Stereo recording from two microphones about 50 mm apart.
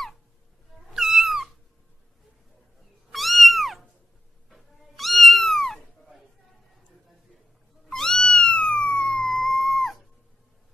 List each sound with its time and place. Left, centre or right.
0.9 s cat: centre
3.1 s cat: centre
7.9 s cat: centre
8.5 s a sound: centre
9.0 s dog: centre